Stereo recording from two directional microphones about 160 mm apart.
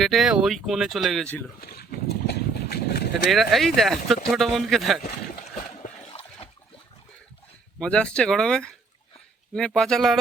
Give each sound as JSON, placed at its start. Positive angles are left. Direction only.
{"t": 0.0, "sound": "speech", "side_deg": 0}
{"t": 1.6, "sound": "horse", "side_deg": 70}
{"t": 3.2, "sound": "speech", "side_deg": 0}
{"t": 6.1, "sound": "a sound", "side_deg": 40}
{"t": 7.8, "sound": "speech", "side_deg": 5}